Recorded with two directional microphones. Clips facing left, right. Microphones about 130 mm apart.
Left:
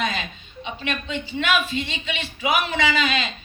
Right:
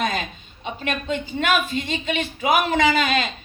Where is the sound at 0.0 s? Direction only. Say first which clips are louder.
Right 2 dB; 50° right (ahead or behind).